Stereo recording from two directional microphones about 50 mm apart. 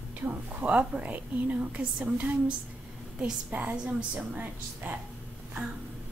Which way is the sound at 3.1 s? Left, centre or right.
Right.